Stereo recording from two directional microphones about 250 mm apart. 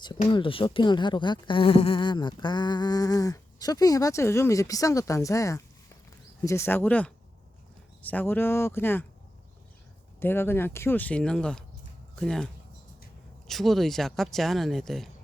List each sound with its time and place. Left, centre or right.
0.2 s speech: centre
10.2 s speech: centre
13.5 s speech: centre